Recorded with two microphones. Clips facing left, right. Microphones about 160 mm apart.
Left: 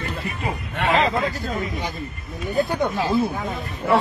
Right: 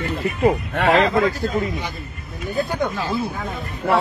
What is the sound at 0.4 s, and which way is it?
Speech, 50° right (ahead or behind).